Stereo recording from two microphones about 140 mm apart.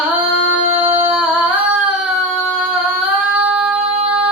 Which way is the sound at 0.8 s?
45° right (ahead or behind).